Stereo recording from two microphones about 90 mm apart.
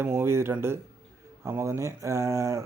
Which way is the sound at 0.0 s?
25° right (ahead or behind).